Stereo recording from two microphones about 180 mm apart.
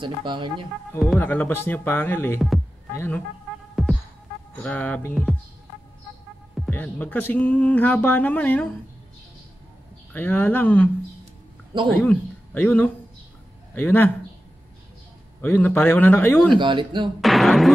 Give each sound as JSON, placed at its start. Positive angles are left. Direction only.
{"t": 0.0, "sound": "speech", "side_deg": -25}
{"t": 0.9, "sound": "speech", "side_deg": 10}
{"t": 3.8, "sound": "music", "side_deg": 0}
{"t": 4.6, "sound": "speech", "side_deg": 10}
{"t": 6.7, "sound": "speech", "side_deg": 10}
{"t": 10.1, "sound": "speech", "side_deg": 10}
{"t": 11.9, "sound": "speech", "side_deg": 10}
{"t": 15.4, "sound": "speech", "side_deg": 10}
{"t": 16.5, "sound": "speech", "side_deg": -25}
{"t": 17.2, "sound": "speech", "side_deg": 0}